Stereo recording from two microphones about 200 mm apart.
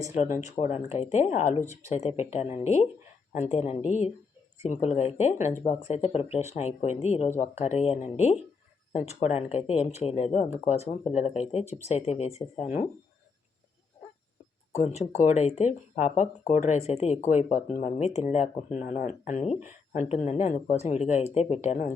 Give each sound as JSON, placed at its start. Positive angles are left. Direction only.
{"t": 0.4, "sound": "speech", "side_deg": 35}
{"t": 14.7, "sound": "speech", "side_deg": 35}